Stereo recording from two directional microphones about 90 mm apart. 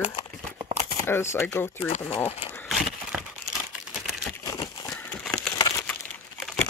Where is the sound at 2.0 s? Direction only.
90° left.